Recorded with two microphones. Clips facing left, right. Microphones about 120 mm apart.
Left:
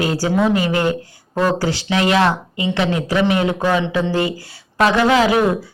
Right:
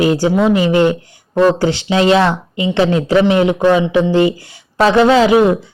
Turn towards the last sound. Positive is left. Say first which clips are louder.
# right 5 dB
turn(degrees=-20)  # may be behind; listen again after turning